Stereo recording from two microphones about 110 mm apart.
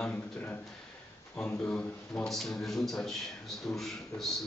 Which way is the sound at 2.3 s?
Centre (ahead or behind).